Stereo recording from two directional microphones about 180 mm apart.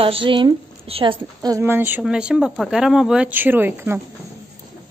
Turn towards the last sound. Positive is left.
turn(degrees=-10)  # may be behind; listen again after turning